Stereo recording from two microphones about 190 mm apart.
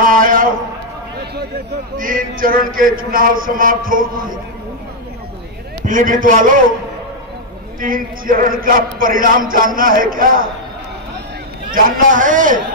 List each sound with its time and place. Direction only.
0.0 s a sound: 45° right (ahead or behind)
2.0 s chant: 45° right (ahead or behind)
5.9 s chant: 45° right (ahead or behind)
7.8 s chant: 45° right (ahead or behind)
11.7 s chant: 45° right (ahead or behind)